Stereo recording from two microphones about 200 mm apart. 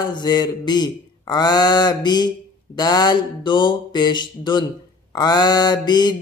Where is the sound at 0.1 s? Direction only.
20° left (ahead or behind).